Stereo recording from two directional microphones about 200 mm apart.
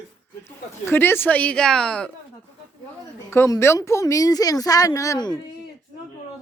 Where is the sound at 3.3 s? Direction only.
15° left (ahead or behind).